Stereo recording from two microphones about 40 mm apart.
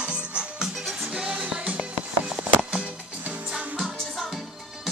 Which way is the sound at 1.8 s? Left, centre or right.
Centre.